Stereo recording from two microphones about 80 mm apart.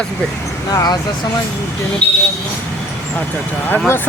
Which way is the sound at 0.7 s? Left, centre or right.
Left.